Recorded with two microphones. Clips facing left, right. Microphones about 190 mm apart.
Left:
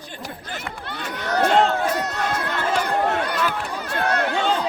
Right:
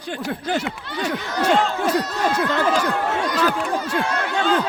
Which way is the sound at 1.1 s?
60° left (ahead or behind).